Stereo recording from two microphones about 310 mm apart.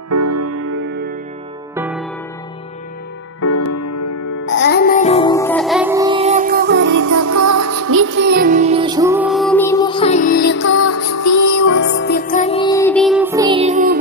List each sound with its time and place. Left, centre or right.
0.1 s music: right
1.8 s music: centre
3.3 s music: left
4.5 s music: left; by 7.0 s right
7.0 s music: right; by 11.8 s left
11.8 s music: left; by 13.9 s right